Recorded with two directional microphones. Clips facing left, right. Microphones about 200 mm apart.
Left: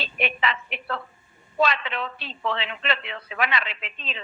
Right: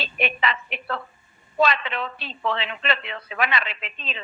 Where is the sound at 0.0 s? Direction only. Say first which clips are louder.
Right 1 dB; 45° right (ahead or behind).